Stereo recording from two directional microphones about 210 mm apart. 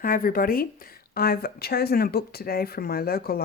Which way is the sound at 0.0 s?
45° left (ahead or behind).